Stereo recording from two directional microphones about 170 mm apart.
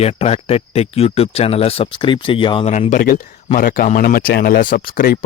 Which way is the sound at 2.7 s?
45° left (ahead or behind).